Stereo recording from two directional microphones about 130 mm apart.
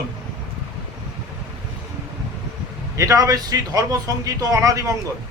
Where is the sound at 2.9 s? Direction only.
25° right (ahead or behind).